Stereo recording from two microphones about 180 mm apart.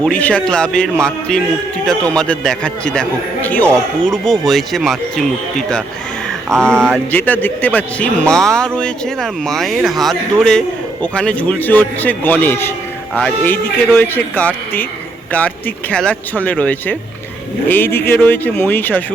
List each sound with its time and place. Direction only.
0.0 s a man's voice: 5° left (ahead or behind)